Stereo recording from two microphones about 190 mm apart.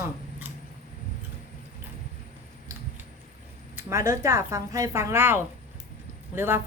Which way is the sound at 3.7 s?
15° right (ahead or behind).